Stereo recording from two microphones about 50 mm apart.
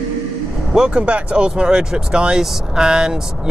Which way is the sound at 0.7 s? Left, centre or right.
Centre.